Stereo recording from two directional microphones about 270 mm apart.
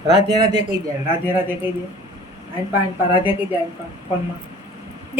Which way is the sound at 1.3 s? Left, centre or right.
Centre.